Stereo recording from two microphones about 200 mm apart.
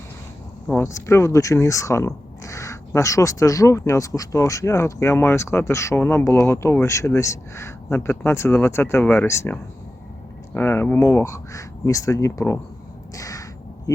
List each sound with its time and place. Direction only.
0.7 s speech: 15° left (ahead or behind)
13.1 s crow: 15° left (ahead or behind)